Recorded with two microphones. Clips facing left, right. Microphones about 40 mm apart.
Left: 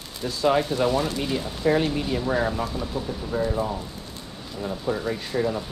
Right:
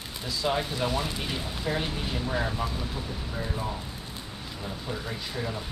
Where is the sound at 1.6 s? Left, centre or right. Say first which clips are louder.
Left 10 dB; left.